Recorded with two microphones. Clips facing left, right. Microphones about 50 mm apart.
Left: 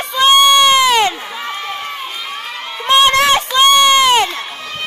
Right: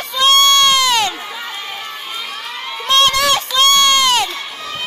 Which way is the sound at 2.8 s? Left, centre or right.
Centre.